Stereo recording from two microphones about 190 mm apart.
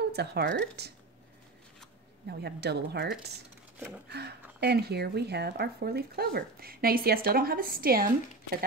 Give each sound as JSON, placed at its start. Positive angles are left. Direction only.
{"t": 0.1, "sound": "speech", "side_deg": -60}
{"t": 2.4, "sound": "speech", "side_deg": -60}
{"t": 4.1, "sound": "a woman's voice", "side_deg": -60}